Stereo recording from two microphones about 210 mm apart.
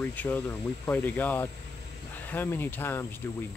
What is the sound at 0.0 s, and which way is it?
Speech, 10° left (ahead or behind).